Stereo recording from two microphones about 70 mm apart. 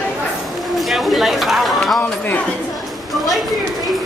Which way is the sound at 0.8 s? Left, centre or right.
Centre.